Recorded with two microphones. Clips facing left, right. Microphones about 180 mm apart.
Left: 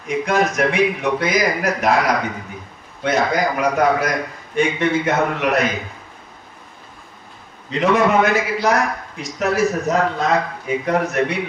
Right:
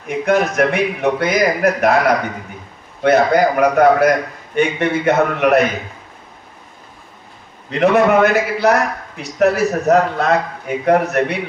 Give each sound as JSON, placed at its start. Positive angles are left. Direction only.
{"t": 0.1, "sound": "a man's voice", "side_deg": -60}
{"t": 7.7, "sound": "a man's voice", "side_deg": -60}